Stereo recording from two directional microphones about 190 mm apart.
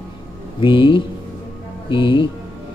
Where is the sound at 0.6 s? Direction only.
25° left (ahead or behind).